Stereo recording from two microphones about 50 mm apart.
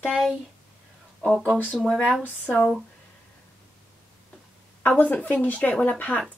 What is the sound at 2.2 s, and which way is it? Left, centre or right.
Speech, left.